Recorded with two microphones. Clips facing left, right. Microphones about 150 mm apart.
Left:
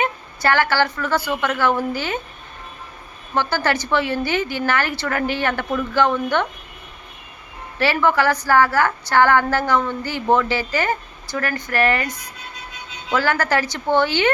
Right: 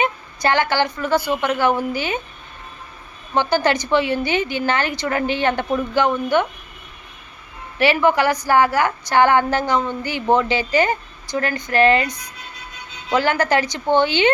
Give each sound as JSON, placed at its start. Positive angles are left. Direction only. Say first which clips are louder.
{"t": 0.0, "sound": "a woman's voice", "louder": "right 1 dB", "side_deg": -20}
{"t": 3.3, "sound": "a woman's voice", "louder": "right 3 dB", "side_deg": -15}
{"t": 7.8, "sound": "a woman's voice", "louder": "right 2 dB", "side_deg": -15}
{"t": 13.1, "sound": "a woman's voice", "louder": "right 2 dB", "side_deg": -20}